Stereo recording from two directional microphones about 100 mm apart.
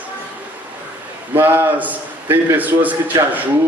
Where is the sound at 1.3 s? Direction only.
20° right (ahead or behind).